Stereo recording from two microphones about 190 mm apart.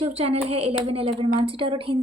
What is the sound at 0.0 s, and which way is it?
Speech, 30° right (ahead or behind).